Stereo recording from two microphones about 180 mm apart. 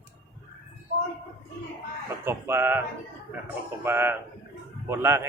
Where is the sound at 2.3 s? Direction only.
15° right (ahead or behind).